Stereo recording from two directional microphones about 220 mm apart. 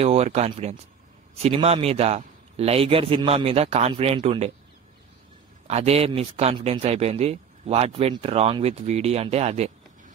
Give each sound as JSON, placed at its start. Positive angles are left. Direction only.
{"t": 0.0, "sound": "speech", "side_deg": -30}
{"t": 5.7, "sound": "speech", "side_deg": -30}